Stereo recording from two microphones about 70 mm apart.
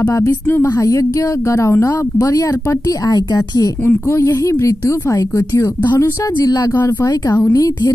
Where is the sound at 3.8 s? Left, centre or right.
Left.